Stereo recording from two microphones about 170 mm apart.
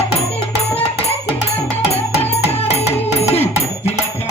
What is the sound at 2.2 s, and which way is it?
Music, 35° left (ahead or behind).